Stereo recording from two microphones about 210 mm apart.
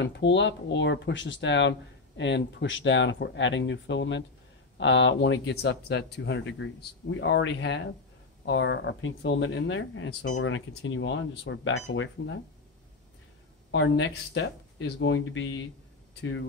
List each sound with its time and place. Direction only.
0.0 s speech: 60° left (ahead or behind)
13.7 s speech: 65° left (ahead or behind)